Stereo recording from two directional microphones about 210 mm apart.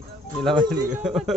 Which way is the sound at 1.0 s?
Centre (ahead or behind).